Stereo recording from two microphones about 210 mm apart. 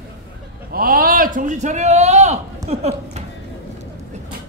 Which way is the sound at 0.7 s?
45° right (ahead or behind).